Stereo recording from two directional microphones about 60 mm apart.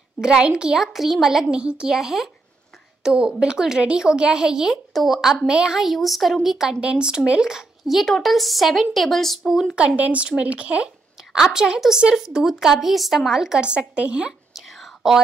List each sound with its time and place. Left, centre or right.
0.2 s a woman's voice: centre
0.7 s speech: centre
1.4 s a woman's voice: centre
6.8 s speech: centre
9.8 s speech: right
11.3 s a woman's voice: centre
14.5 s whispering: centre